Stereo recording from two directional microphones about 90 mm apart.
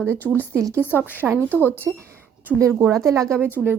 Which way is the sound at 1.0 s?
20° right (ahead or behind).